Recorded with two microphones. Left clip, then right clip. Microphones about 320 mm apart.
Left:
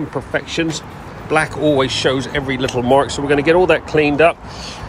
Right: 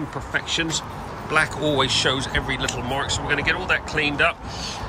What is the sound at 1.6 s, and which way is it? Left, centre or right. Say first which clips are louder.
Speech: left 8 dB; centre.